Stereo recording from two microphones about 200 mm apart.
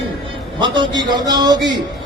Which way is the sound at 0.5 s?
25° right (ahead or behind).